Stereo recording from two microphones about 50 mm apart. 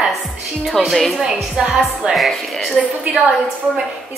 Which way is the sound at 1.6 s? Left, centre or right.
Centre.